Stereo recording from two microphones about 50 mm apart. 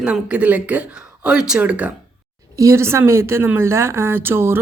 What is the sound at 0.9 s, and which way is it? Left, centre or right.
Speech, centre.